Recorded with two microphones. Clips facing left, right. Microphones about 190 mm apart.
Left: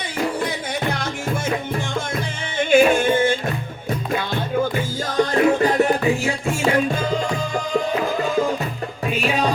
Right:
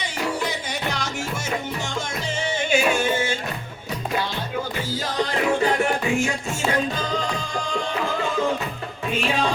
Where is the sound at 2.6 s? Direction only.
55° left (ahead or behind).